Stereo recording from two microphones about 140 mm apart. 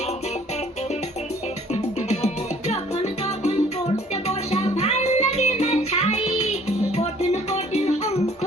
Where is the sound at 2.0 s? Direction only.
50° left (ahead or behind).